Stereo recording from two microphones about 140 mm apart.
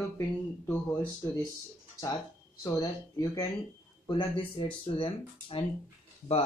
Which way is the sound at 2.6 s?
25° left (ahead or behind).